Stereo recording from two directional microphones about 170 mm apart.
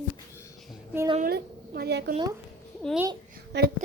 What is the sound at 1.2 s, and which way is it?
Speech, 70° right (ahead or behind).